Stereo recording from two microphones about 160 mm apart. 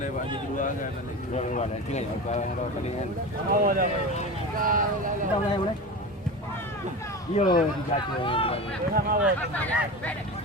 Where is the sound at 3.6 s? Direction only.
60° right (ahead or behind).